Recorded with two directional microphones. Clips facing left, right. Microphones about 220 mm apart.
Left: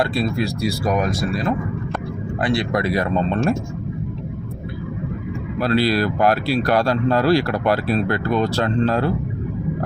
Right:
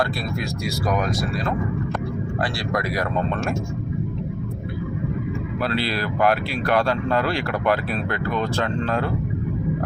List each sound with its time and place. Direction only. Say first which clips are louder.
0.0 s speech: left 5 dB; 25° left (ahead or behind)
2.4 s speech: left 7 dB; 20° left (ahead or behind)
5.6 s speech: left 8 dB; 40° left (ahead or behind)